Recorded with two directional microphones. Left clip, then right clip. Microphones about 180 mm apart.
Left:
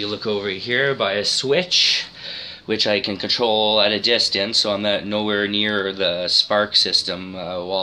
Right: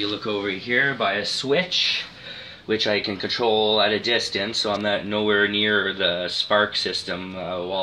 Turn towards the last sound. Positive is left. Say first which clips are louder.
# left 3 dB
turn(degrees=30)  # may be behind; listen again after turning